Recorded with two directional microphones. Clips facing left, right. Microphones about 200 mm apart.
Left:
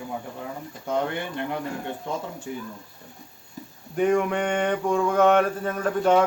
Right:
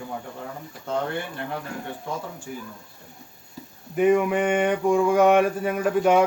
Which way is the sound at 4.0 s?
5° right (ahead or behind).